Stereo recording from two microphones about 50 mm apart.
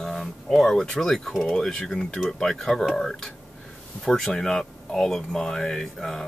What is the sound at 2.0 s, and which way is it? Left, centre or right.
Speech, left.